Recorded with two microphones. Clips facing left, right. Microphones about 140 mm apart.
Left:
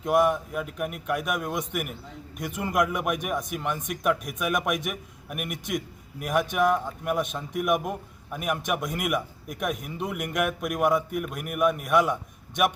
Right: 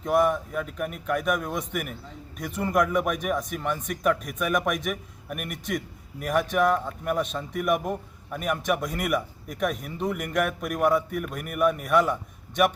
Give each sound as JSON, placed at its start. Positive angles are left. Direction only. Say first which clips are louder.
{"t": 0.0, "sound": "a man's voice", "louder": "even", "side_deg": 10}